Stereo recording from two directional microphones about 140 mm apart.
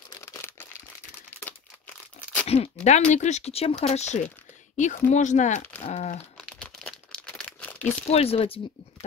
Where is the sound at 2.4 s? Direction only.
45° left (ahead or behind).